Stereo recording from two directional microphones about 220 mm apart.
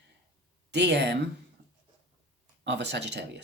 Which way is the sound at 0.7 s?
50° right (ahead or behind).